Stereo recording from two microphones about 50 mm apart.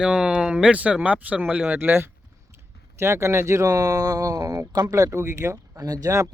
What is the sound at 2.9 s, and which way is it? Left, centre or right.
Speech, right.